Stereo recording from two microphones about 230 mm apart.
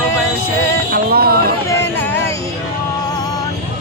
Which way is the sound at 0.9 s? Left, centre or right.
Right.